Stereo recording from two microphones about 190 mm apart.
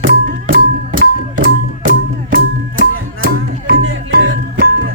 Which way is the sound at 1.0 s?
45° right (ahead or behind).